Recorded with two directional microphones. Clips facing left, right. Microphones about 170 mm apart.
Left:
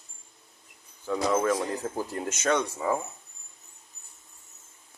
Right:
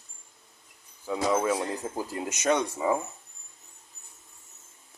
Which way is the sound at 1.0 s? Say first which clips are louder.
Left 1 dB; 10° right (ahead or behind).